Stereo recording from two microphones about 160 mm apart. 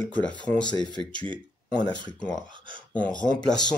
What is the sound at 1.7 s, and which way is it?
Speech, 25° left (ahead or behind).